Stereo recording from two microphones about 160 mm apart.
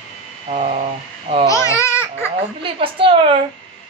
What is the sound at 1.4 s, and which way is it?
Babbling, 20° left (ahead or behind).